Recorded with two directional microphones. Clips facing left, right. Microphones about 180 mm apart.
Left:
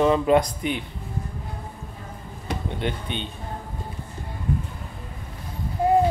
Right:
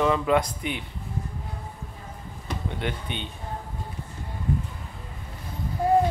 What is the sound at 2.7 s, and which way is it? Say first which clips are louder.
Speech: left 2 dB; 25° left (ahead or behind).